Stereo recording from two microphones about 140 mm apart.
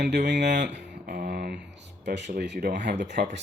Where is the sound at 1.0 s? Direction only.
90° right.